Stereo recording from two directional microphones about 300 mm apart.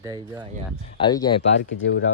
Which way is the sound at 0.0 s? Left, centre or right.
Centre.